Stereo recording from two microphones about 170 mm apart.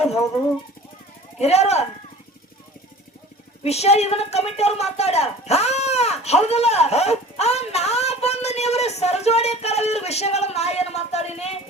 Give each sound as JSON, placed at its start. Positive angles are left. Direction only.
{"t": 1.4, "sound": "a woman's voice", "side_deg": 40}
{"t": 3.6, "sound": "a woman's voice", "side_deg": 40}